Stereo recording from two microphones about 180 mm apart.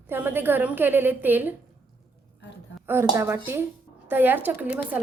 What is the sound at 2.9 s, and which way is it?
A woman's voice, 10° right (ahead or behind).